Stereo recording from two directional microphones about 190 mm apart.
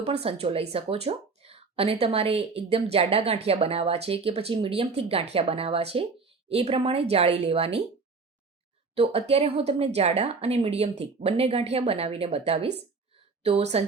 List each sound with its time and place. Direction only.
0.0 s a woman's voice: 30° right (ahead or behind)
9.0 s a woman's voice: 35° right (ahead or behind)